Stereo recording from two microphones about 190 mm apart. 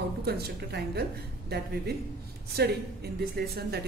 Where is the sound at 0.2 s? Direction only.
55° right (ahead or behind).